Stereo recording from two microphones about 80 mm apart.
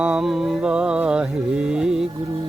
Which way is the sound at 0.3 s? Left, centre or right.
Centre.